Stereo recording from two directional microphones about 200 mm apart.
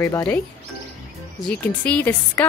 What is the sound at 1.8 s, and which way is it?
Speech, 10° left (ahead or behind).